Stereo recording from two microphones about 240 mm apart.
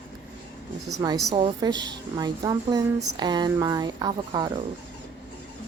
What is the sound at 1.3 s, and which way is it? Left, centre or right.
A woman's voice, centre.